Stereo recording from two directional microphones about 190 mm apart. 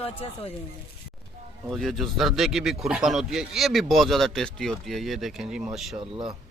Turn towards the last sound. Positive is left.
turn(degrees=-25)  # may be behind; listen again after turning